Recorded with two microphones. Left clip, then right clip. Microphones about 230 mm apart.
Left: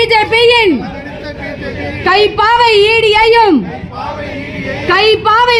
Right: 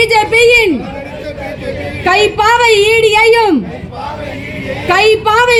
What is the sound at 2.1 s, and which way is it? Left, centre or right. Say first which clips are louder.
Speech: left 1 dB; left.